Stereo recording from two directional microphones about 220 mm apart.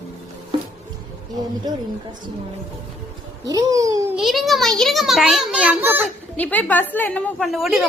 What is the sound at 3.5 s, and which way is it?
Speech, 15° right (ahead or behind).